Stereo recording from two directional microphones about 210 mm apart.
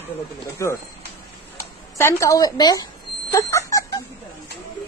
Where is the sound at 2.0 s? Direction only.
15° left (ahead or behind).